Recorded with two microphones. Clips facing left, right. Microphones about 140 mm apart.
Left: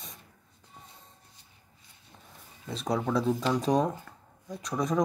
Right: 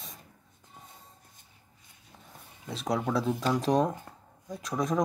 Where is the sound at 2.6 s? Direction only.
Centre (ahead or behind).